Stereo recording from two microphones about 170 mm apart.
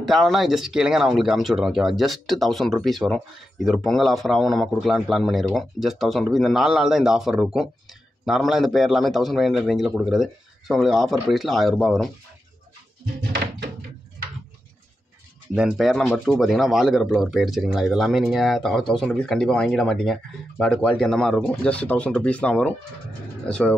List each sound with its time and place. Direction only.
0.0 s speech: centre (ahead or behind)
13.3 s thunk: 65° right (ahead or behind)
15.5 s speech: 5° right (ahead or behind)